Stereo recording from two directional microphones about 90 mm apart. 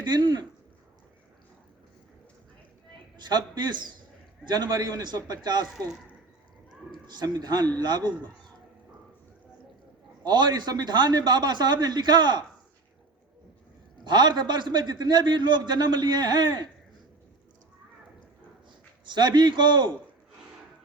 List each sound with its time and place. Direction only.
0.0 s a man's voice: 55° right (ahead or behind)
3.2 s a man's voice: 55° right (ahead or behind)
7.1 s a man's voice: 50° right (ahead or behind)
10.2 s a man's voice: 55° right (ahead or behind)
14.0 s a man's voice: 55° right (ahead or behind)
19.0 s a man's voice: 55° right (ahead or behind)